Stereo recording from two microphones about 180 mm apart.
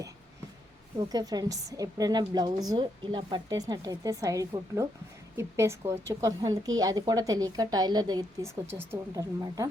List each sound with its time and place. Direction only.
0.9 s a woman's voice: 20° right (ahead or behind)